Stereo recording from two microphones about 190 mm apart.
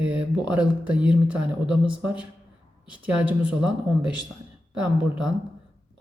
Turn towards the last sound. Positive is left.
turn(degrees=-5)  # may be behind; listen again after turning